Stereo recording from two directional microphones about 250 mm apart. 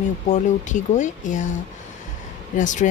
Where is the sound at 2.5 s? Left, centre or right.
Left.